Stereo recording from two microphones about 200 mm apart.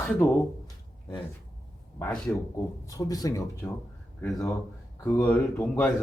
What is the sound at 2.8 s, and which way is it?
Speech, 15° left (ahead or behind).